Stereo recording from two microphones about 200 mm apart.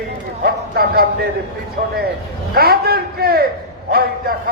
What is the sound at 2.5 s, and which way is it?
A man's voice, 50° right (ahead or behind).